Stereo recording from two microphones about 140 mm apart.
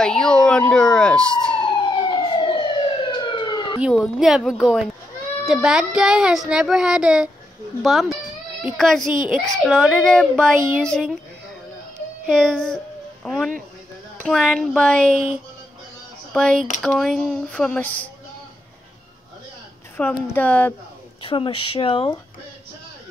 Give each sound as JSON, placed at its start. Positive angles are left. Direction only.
{"t": 0.0, "sound": "speech", "side_deg": 5}
{"t": 1.9, "sound": "emergency vehicle", "side_deg": 35}
{"t": 3.9, "sound": "speech", "side_deg": 0}
{"t": 9.0, "sound": "a child's voice", "side_deg": -70}
{"t": 9.8, "sound": "speech", "side_deg": 5}
{"t": 12.4, "sound": "a child's voice", "side_deg": 5}
{"t": 16.3, "sound": "speech", "side_deg": 5}
{"t": 20.0, "sound": "speech", "side_deg": 10}
{"t": 21.2, "sound": "speech", "side_deg": 40}